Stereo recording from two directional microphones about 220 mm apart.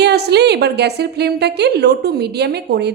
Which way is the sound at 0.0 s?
50° right (ahead or behind).